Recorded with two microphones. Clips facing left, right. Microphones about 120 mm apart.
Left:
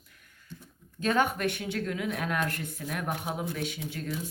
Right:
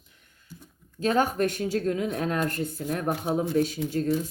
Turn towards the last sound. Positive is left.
turn(degrees=-40)  # may be behind; listen again after turning